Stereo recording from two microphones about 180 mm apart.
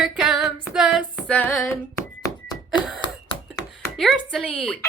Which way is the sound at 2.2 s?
20° left (ahead or behind).